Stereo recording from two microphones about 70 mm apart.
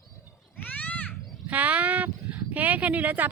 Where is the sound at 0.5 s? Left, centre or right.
Left.